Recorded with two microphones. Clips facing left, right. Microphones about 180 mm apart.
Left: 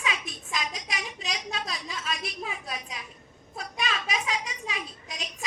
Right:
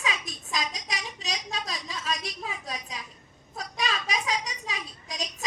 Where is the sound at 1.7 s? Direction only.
40° right (ahead or behind).